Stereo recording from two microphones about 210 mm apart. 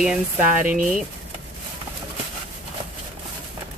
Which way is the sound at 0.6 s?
40° right (ahead or behind).